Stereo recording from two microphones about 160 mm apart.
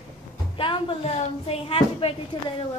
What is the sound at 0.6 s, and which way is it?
A woman's voice, 35° left (ahead or behind).